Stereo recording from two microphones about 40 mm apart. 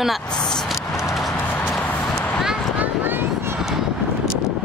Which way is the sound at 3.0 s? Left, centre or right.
Right.